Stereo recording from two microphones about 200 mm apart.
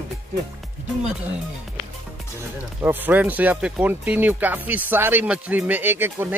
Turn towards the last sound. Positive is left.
turn(degrees=-10)  # may be behind; listen again after turning